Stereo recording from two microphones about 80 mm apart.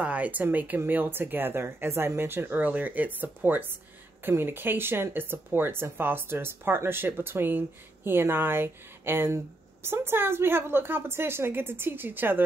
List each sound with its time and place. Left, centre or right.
0.0 s speech: centre